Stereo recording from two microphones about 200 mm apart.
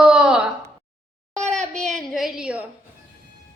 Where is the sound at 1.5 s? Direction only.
35° right (ahead or behind).